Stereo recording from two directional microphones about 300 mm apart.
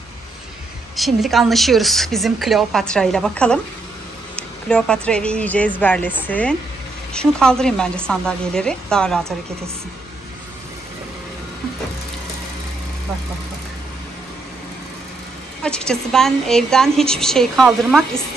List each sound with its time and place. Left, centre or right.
0.9 s a woman's voice: centre
15.6 s a woman's voice: centre